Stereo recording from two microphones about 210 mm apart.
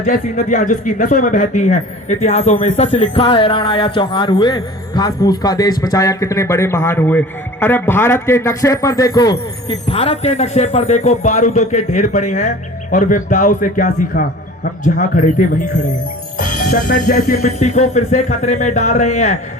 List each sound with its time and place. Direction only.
0.0 s a man's voice: 35° left (ahead or behind); by 9.7 s 20° left (ahead or behind)
9.9 s speech: 30° left (ahead or behind)